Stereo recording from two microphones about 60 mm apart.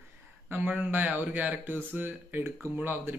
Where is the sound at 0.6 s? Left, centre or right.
Right.